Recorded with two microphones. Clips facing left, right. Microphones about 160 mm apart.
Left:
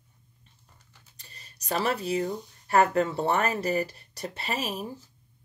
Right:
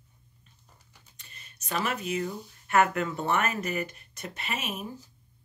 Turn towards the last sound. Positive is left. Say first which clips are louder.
# left 3 dB
turn(degrees=35)  # may be behind; listen again after turning